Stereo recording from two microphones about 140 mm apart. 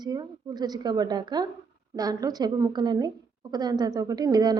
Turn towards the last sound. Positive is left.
turn(degrees=-30)  # may be behind; listen again after turning